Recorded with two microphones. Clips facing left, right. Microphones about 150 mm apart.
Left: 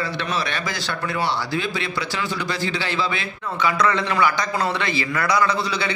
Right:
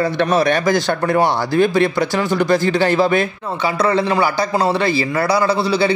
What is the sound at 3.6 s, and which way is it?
A man's voice, 35° right (ahead or behind).